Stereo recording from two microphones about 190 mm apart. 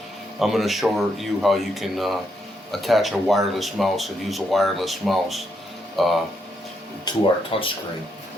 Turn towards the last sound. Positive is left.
turn(degrees=30)  # may be behind; listen again after turning